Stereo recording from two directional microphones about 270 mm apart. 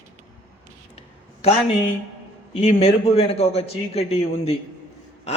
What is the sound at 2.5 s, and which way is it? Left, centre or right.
A man's voice, left.